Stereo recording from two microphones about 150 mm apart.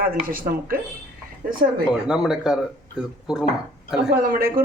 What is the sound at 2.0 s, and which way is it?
Speech, 5° right (ahead or behind).